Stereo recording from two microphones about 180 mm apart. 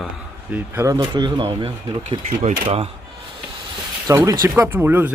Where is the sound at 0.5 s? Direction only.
15° right (ahead or behind); by 2.9 s 30° right (ahead or behind).